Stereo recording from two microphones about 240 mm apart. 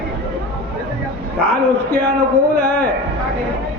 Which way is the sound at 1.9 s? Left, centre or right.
Left.